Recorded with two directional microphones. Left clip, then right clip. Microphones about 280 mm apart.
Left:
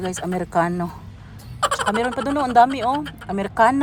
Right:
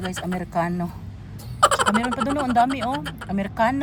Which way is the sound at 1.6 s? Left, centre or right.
Centre.